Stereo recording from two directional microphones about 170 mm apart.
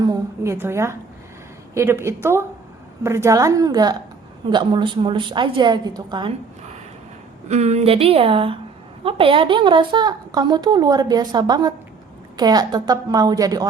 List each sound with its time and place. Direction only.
0.0 s a sound: 20° right (ahead or behind)
1.7 s a woman's voice: 15° right (ahead or behind)
7.4 s a woman's voice: 40° right (ahead or behind); by 13.7 s 20° right (ahead or behind)